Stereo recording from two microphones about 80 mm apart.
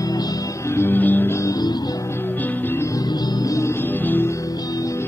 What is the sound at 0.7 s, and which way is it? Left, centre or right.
Music, left.